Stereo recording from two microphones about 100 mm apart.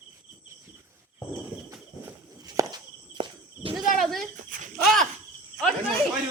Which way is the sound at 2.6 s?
35° right (ahead or behind).